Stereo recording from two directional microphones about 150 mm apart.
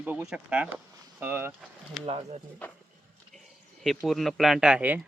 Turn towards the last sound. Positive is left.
turn(degrees=-10)  # may be behind; listen again after turning